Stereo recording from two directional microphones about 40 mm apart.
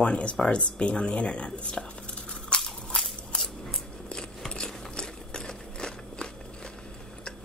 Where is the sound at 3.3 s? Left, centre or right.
Left.